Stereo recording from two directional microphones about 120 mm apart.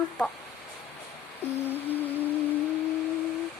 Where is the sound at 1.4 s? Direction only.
15° left (ahead or behind).